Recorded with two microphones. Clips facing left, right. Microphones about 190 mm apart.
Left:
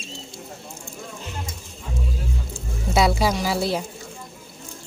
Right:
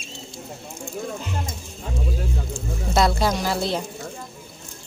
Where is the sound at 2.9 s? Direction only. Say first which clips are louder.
Left 1 dB; 10° left (ahead or behind).